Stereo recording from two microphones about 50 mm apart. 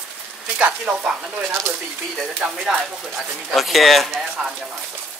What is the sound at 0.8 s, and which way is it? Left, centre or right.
Speech, right.